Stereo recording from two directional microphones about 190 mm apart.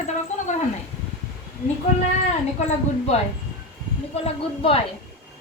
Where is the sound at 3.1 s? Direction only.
35° left (ahead or behind).